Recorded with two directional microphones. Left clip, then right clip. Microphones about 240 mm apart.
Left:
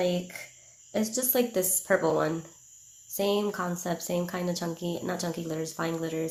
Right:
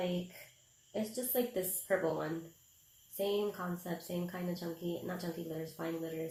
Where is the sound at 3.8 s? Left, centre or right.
Left.